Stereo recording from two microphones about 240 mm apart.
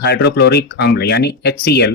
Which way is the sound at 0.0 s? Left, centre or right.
Left.